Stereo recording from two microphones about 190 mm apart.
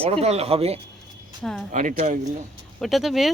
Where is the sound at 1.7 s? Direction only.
45° right (ahead or behind).